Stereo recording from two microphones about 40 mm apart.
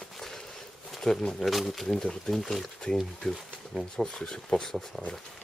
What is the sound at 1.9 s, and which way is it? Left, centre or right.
Speech, centre.